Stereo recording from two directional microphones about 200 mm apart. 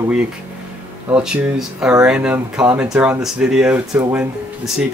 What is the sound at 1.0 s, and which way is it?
Speech, 5° right (ahead or behind).